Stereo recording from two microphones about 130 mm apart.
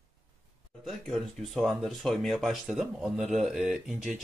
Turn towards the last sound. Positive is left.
turn(degrees=0)  # may be behind; listen again after turning